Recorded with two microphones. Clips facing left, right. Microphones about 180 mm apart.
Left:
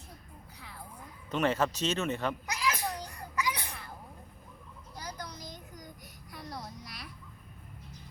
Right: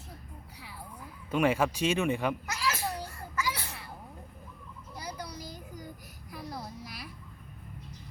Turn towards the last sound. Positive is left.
turn(degrees=-5)  # may be behind; listen again after turning